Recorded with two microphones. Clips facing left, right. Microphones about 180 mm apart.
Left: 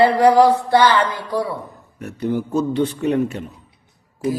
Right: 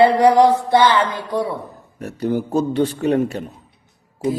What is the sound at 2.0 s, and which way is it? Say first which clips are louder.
A man's voice: right 1 dB; 35° right (ahead or behind).